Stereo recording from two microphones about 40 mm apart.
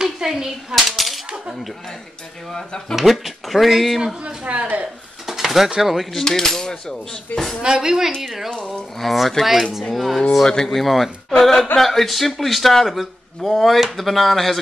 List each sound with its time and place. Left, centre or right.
0.0 s speech: centre
0.8 s speech: centre
2.5 s speech: centre
3.1 s speech: centre
4.2 s a sound: right
5.2 s dishes: centre
5.8 s speech: centre
6.1 s cutlery: centre
7.3 s speech: left
7.6 s speech: centre
9.0 s speech: centre
10.4 s cutlery: centre
10.8 s speech: centre